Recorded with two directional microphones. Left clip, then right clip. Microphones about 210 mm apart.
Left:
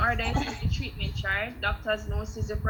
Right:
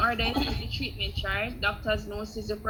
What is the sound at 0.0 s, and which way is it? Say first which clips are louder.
A woman's voice: right 1 dB; 15° right (ahead or behind).